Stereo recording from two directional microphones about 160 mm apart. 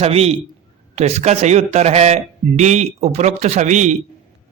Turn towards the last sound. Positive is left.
turn(degrees=-50)  # may be behind; listen again after turning